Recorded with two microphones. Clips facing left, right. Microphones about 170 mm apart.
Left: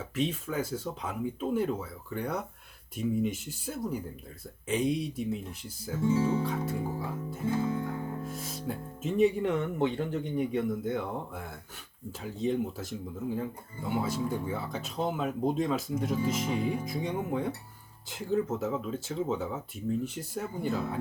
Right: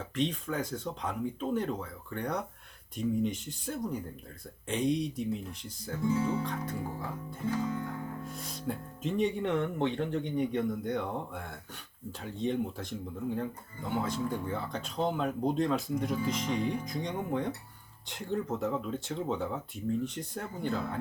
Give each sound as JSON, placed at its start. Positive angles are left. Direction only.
{"t": 0.2, "sound": "speech", "side_deg": 5}
{"t": 6.0, "sound": "speech", "side_deg": 25}
{"t": 6.4, "sound": "speech", "side_deg": 5}
{"t": 7.3, "sound": "guitar", "side_deg": 5}
{"t": 7.9, "sound": "speech", "side_deg": 0}